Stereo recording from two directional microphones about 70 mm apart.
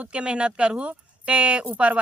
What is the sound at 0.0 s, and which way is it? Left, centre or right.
Speech, centre.